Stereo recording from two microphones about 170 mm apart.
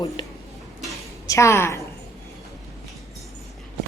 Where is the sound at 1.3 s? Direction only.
15° left (ahead or behind).